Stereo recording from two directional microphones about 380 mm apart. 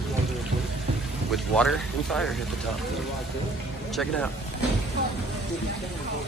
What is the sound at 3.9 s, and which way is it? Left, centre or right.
Speech, centre.